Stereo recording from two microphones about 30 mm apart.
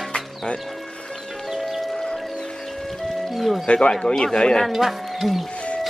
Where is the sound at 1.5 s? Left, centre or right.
Centre.